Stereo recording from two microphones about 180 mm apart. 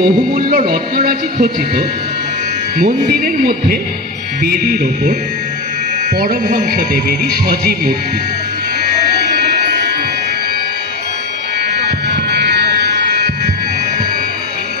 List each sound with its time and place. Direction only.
0.0 s speech: 55° right (ahead or behind)
6.1 s music: 55° right (ahead or behind)
7.4 s speech: 55° right (ahead or behind)
11.7 s buzzer: 65° right (ahead or behind)